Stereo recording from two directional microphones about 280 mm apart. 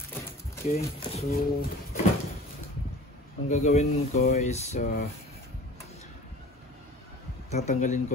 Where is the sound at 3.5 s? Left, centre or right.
Left.